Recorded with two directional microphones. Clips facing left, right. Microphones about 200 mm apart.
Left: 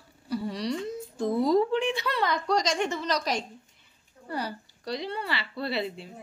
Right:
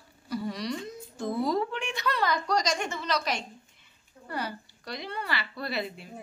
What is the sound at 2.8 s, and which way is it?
Speech, 40° left (ahead or behind).